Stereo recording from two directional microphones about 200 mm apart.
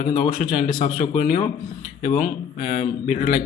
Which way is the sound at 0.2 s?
45° left (ahead or behind).